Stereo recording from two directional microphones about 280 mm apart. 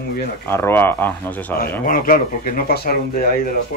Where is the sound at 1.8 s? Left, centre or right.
Left.